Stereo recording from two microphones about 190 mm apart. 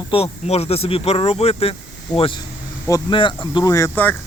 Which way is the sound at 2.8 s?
20° left (ahead or behind).